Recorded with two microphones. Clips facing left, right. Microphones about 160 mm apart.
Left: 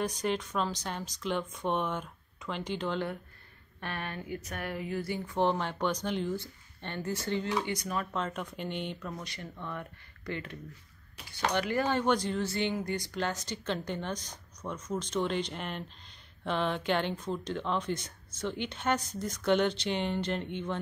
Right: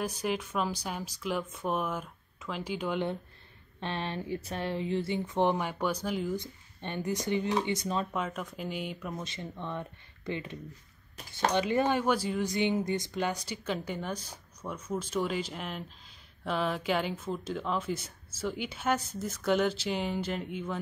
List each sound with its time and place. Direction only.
0.0 s speech: 5° right (ahead or behind)
3.8 s speech: 25° right (ahead or behind); by 6.3 s 5° right (ahead or behind)
6.3 s speech: 15° right (ahead or behind)
8.1 s speech: 5° right (ahead or behind)
9.1 s speech: 20° right (ahead or behind)
12.0 s speech: 5° right (ahead or behind)